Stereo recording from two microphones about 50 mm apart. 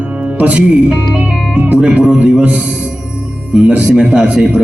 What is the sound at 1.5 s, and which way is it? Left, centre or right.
Music, right.